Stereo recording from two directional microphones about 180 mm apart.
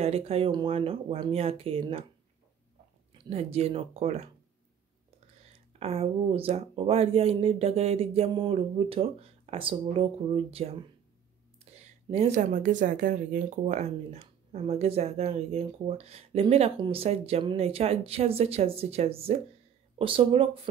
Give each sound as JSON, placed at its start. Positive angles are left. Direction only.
{"t": 0.0, "sound": "speech", "side_deg": -35}
{"t": 3.1, "sound": "speech", "side_deg": -35}
{"t": 5.7, "sound": "speech", "side_deg": -35}